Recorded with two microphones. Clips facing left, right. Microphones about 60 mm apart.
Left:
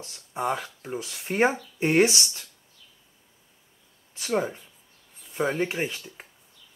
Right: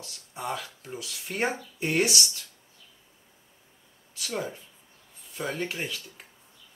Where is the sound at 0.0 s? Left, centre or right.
Left.